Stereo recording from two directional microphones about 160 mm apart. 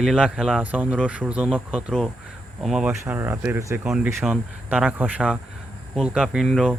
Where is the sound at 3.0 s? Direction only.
15° right (ahead or behind).